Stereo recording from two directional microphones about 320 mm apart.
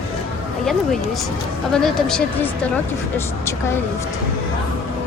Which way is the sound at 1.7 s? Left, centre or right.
Centre.